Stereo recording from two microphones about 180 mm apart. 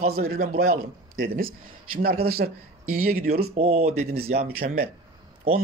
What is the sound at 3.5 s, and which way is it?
Speech, 35° right (ahead or behind).